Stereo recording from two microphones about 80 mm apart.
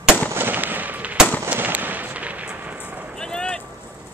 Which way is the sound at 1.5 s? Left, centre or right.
Right.